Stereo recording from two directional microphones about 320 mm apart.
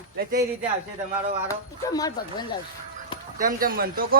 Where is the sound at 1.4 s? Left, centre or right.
Centre.